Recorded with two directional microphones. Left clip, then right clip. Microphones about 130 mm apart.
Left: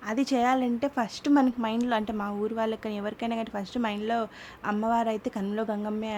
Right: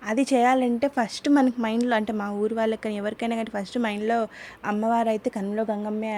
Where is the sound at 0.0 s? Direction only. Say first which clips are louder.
Right 5 dB; 40° right (ahead or behind).